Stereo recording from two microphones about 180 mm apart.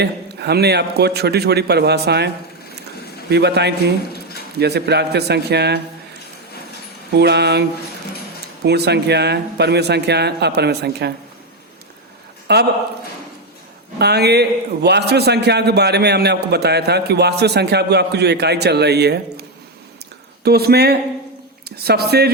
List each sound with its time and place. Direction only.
0.0 s a man's voice: 65° right (ahead or behind)
7.2 s speech: 65° right (ahead or behind)
8.6 s speech: 65° right (ahead or behind)
12.5 s speech: 70° right (ahead or behind)
14.0 s a man's voice: 65° right (ahead or behind)